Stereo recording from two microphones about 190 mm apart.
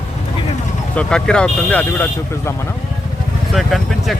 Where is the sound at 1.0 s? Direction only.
5° left (ahead or behind).